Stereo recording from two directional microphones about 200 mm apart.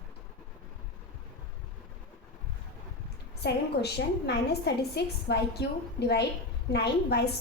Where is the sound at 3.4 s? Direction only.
55° left (ahead or behind).